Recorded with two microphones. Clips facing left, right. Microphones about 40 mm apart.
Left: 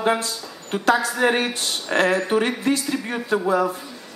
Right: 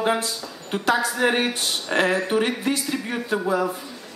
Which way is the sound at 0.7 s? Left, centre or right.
Centre.